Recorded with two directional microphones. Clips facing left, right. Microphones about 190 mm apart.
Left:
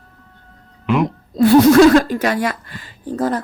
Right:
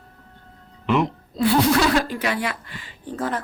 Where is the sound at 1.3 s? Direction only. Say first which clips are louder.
Left 10 dB; 45° left (ahead or behind).